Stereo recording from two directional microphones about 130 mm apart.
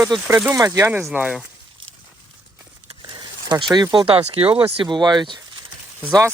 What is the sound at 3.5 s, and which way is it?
Speech, 30° right (ahead or behind).